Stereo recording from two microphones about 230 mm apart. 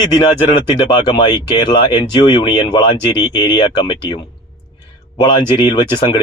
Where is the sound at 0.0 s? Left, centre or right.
Centre.